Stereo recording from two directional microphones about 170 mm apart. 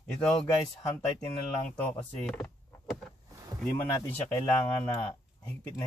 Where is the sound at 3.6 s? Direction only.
15° left (ahead or behind).